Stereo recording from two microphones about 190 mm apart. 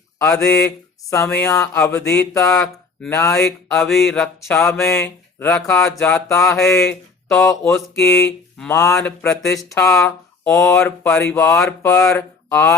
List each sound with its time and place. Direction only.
0.2 s speech: 10° left (ahead or behind)
3.3 s mantra: 5° left (ahead or behind)
4.4 s speech: 15° left (ahead or behind)
6.8 s speech: 5° left (ahead or behind)
7.9 s speech: 15° left (ahead or behind)
9.0 s mantra: 5° left (ahead or behind)
9.7 s speech: 15° left (ahead or behind)